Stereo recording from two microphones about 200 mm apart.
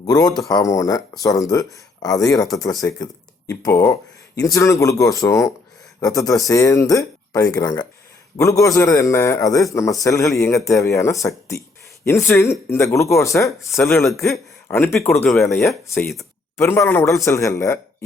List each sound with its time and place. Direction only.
0.0 s speech: 20° left (ahead or behind)